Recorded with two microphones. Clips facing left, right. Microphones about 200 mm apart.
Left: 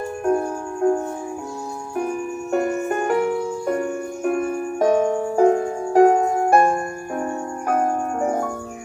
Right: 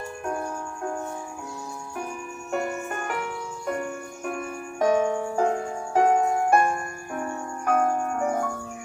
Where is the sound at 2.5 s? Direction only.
45° left (ahead or behind).